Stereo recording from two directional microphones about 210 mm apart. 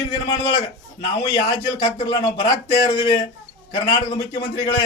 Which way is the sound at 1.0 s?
25° left (ahead or behind).